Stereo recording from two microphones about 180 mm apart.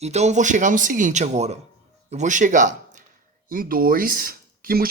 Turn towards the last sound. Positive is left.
turn(degrees=-55)  # may be behind; listen again after turning